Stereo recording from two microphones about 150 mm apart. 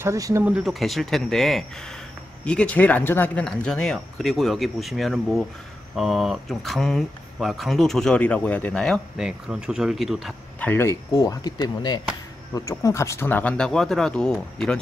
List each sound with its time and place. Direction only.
0.0 s speech: 20° right (ahead or behind)
0.5 s speech: 5° right (ahead or behind)
10.6 s speech: 15° left (ahead or behind)